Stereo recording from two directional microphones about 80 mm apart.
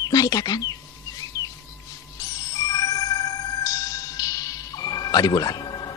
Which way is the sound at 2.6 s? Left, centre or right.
Left.